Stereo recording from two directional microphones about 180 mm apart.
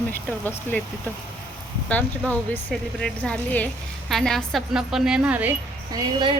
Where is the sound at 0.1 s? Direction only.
10° left (ahead or behind).